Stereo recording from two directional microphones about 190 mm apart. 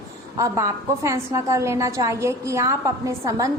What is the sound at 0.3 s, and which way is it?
A woman's voice, 15° right (ahead or behind).